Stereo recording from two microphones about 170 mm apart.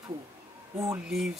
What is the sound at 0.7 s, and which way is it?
Speech, 15° right (ahead or behind).